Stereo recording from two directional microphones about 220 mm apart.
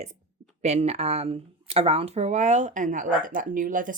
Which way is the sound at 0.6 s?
30° right (ahead or behind).